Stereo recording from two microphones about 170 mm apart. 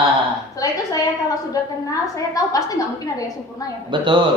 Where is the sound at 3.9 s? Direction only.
25° right (ahead or behind).